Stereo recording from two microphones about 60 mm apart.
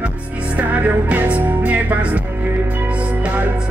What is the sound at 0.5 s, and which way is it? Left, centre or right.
Music, right.